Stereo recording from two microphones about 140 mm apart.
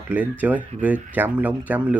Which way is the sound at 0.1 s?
10° right (ahead or behind).